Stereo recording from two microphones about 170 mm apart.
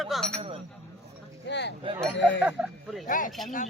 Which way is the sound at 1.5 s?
90° left.